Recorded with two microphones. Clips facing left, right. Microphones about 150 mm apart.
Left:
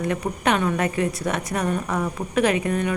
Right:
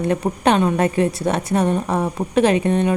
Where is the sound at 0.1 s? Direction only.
30° right (ahead or behind).